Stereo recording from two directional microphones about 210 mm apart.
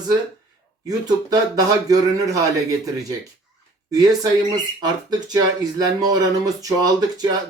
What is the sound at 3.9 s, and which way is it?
Speech, 20° right (ahead or behind).